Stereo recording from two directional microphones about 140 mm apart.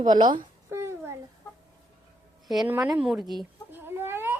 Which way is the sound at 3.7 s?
15° right (ahead or behind).